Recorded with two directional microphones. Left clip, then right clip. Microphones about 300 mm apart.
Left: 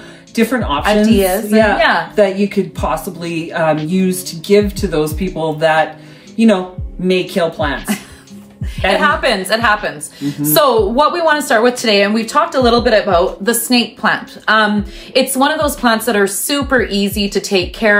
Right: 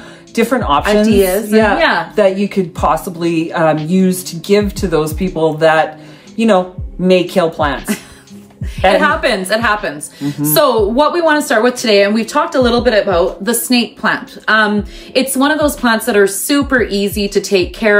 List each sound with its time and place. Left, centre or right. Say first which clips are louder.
0.4 s speech: right 3 dB; centre
1.0 s a woman's voice: right 1 dB; centre
2.3 s speech: even; centre
8.9 s a woman's voice: left 3 dB; centre